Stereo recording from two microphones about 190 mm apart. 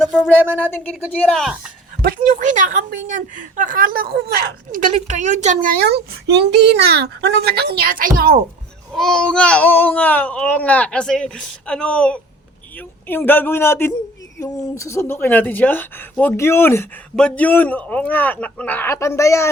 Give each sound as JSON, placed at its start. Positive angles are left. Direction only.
{"t": 1.1, "sound": "speech", "side_deg": 5}
{"t": 2.3, "sound": "a woman's voice", "side_deg": -40}
{"t": 8.9, "sound": "a woman's voice", "side_deg": 0}